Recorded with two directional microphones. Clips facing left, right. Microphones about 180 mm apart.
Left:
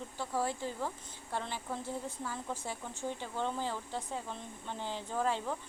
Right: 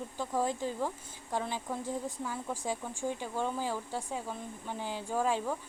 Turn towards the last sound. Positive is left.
turn(degrees=-10)  # may be behind; listen again after turning